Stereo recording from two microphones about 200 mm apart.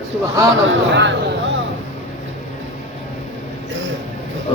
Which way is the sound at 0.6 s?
60° right (ahead or behind).